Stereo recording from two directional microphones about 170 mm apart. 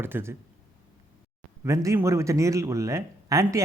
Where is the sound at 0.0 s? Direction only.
15° right (ahead or behind).